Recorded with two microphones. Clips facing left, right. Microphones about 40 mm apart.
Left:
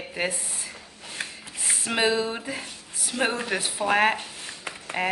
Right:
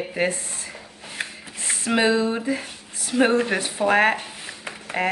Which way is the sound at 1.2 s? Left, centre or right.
Right.